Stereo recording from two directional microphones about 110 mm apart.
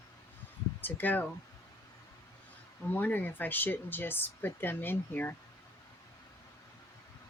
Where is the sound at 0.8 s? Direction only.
15° left (ahead or behind).